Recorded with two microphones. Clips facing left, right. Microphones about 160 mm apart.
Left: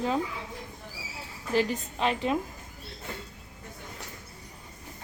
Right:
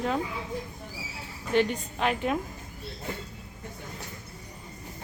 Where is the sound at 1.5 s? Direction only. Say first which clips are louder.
Right 2 dB; centre (ahead or behind).